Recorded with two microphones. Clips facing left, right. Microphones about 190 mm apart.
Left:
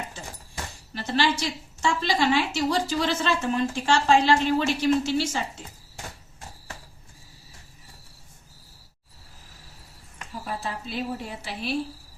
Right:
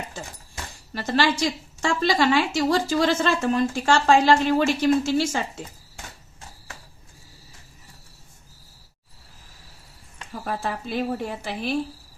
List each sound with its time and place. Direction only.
0.9 s a woman's voice: 45° right (ahead or behind)
10.4 s a woman's voice: 55° right (ahead or behind)